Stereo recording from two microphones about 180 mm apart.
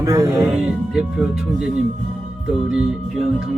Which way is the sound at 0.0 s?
20° right (ahead or behind).